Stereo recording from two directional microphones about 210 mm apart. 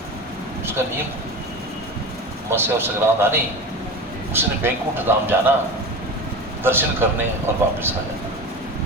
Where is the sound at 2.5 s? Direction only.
10° right (ahead or behind).